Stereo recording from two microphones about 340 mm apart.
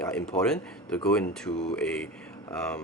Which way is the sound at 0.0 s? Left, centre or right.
Centre.